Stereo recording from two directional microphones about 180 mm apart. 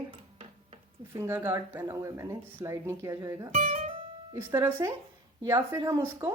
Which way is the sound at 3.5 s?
35° right (ahead or behind).